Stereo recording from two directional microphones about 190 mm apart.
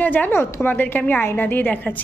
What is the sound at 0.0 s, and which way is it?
A woman's voice, 10° left (ahead or behind).